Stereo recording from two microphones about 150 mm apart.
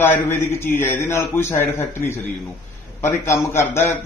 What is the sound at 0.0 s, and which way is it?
A man's voice, 15° left (ahead or behind).